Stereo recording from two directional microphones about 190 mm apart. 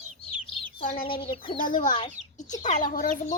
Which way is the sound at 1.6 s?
45° left (ahead or behind).